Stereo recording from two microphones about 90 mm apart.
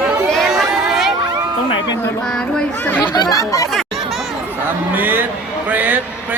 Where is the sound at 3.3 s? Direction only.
40° left (ahead or behind).